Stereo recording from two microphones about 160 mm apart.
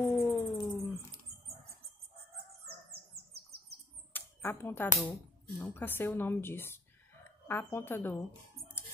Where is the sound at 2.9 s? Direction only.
80° right.